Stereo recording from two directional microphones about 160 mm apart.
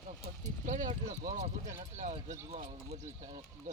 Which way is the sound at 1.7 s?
50° right (ahead or behind).